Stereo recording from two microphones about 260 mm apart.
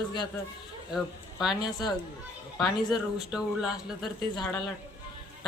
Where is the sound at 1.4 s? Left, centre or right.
Centre.